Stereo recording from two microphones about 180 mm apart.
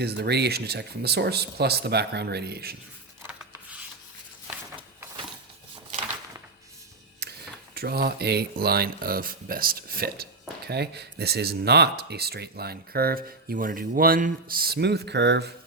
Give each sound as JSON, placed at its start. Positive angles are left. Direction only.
{"t": 0.0, "sound": "speech", "side_deg": -65}
{"t": 3.2, "sound": "rub", "side_deg": -10}
{"t": 7.2, "sound": "a sound", "side_deg": -60}
{"t": 7.8, "sound": "speech", "side_deg": -60}
{"t": 10.7, "sound": "speech", "side_deg": -65}